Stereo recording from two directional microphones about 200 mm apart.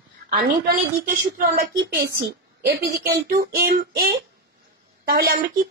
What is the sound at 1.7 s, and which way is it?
A child's voice, 55° right (ahead or behind).